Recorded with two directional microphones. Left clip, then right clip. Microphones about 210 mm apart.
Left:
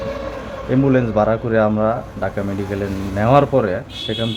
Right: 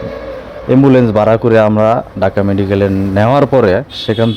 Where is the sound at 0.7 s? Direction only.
40° right (ahead or behind).